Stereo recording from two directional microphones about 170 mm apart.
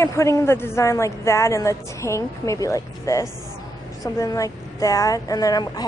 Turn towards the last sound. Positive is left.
turn(degrees=20)  # may be behind; listen again after turning